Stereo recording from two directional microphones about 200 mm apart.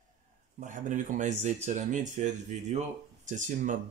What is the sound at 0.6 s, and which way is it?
Speech, 40° right (ahead or behind).